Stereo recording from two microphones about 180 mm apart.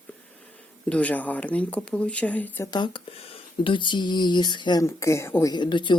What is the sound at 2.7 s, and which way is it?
Speech, 25° left (ahead or behind).